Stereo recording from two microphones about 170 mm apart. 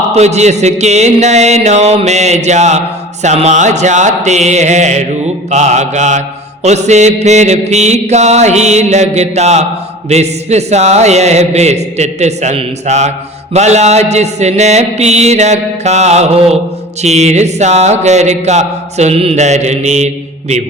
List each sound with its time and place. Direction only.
0.1 s a man's voice: 40° right (ahead or behind)
3.2 s mantra: 45° right (ahead or behind)
10.1 s a man's voice: 40° right (ahead or behind)